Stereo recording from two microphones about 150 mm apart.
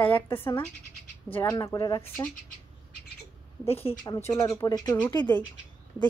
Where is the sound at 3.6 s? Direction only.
45° left (ahead or behind).